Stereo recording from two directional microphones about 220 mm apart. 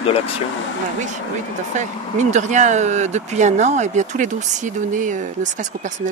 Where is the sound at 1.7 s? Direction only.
35° right (ahead or behind).